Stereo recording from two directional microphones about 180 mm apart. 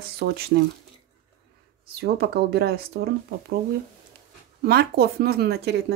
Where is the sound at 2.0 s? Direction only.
65° right (ahead or behind).